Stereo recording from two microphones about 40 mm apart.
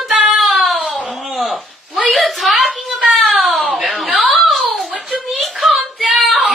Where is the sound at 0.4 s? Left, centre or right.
Centre.